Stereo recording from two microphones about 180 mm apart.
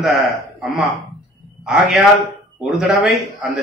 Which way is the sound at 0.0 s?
Centre (ahead or behind).